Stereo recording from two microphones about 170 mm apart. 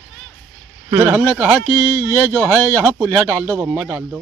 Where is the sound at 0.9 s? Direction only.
10° right (ahead or behind).